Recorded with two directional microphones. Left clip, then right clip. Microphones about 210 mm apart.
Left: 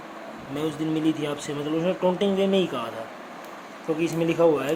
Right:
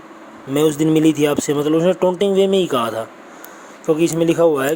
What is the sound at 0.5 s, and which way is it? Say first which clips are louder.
Speech: right 12 dB; 50° right (ahead or behind).